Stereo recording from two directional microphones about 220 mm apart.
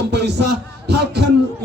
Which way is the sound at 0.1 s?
50° right (ahead or behind).